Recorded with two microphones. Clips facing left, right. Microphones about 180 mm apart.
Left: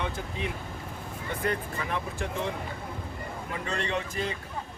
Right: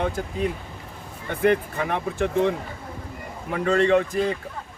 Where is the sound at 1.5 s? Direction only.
65° right (ahead or behind).